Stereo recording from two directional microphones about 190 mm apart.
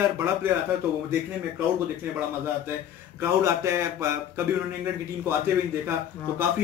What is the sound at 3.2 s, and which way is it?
Speech, 15° right (ahead or behind).